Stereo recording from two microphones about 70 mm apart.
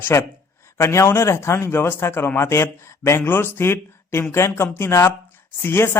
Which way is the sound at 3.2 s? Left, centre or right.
Left.